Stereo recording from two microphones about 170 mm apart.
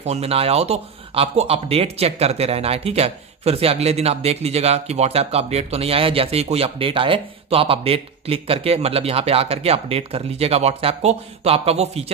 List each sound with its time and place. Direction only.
0.0 s speech: 40° right (ahead or behind)